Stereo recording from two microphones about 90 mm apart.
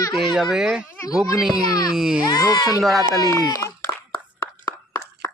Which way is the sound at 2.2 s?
50° left (ahead or behind).